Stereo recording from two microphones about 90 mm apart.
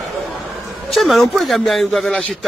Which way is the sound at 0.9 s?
Centre (ahead or behind).